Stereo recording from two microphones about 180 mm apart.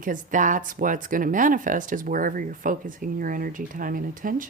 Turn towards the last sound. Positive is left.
turn(degrees=-50)  # may be behind; listen again after turning